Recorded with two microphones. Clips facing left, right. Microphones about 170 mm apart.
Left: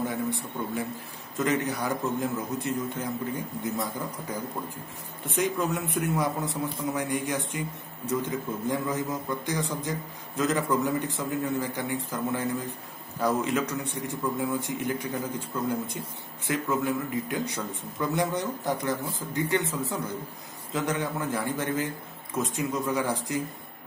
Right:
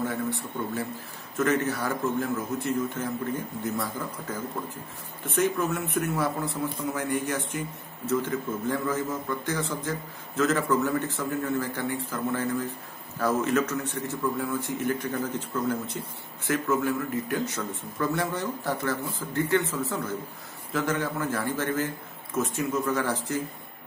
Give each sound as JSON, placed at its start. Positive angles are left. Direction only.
{"t": 1.4, "sound": "a man's voice", "side_deg": 15}